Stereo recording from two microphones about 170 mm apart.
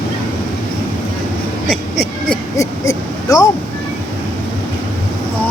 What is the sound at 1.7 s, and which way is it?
Speech, centre (ahead or behind).